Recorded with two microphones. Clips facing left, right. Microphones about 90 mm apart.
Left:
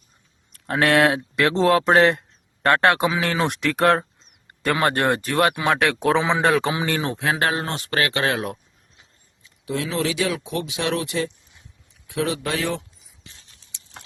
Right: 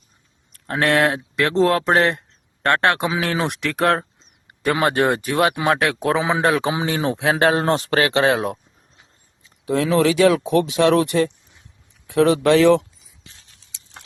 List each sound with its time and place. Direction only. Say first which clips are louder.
0.7 s speech: even; centre (ahead or behind)
4.4 s speech: right 2 dB; 10° right (ahead or behind)
7.6 s speech: right 6 dB; 35° right (ahead or behind)
9.4 s a sound: right 6 dB; 35° right (ahead or behind)
9.8 s speech: right 9 dB; 55° right (ahead or behind); by 12.8 s 70° right (ahead or behind)